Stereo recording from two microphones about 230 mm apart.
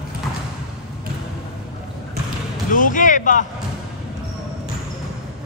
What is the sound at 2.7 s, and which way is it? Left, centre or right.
Speech, left.